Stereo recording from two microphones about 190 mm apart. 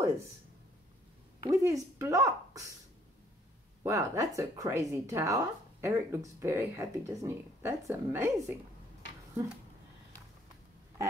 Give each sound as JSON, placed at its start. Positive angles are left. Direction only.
{"t": 1.4, "sound": "speech", "side_deg": -15}
{"t": 3.8, "sound": "speech", "side_deg": -15}